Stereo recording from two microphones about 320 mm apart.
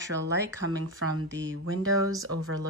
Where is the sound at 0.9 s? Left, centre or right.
Right.